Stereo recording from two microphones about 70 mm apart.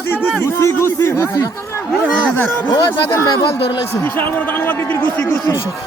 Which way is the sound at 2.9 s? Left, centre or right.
Left.